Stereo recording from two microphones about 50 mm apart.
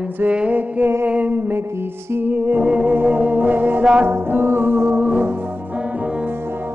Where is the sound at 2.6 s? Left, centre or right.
Right.